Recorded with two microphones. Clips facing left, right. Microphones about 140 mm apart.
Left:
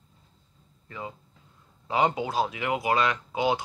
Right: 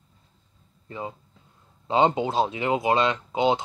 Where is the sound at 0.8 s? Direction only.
25° right (ahead or behind).